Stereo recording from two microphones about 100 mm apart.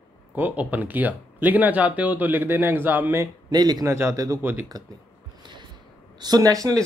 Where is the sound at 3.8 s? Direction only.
30° right (ahead or behind).